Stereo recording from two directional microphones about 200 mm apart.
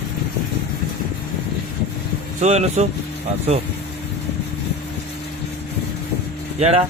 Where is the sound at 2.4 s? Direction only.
35° right (ahead or behind).